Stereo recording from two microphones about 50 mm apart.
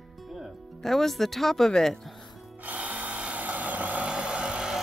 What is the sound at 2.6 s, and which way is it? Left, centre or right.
Wood, right.